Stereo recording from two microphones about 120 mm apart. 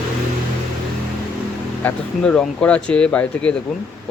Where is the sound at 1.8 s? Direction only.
10° left (ahead or behind).